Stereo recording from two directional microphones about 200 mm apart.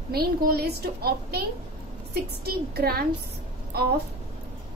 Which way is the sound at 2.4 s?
50° right (ahead or behind).